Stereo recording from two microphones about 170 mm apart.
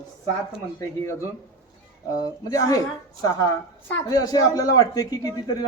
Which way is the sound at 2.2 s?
20° left (ahead or behind).